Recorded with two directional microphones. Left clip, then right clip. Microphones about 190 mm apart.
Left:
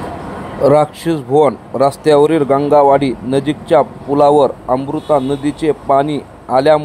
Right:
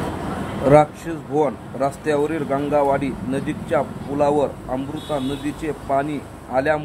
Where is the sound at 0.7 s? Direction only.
45° left (ahead or behind).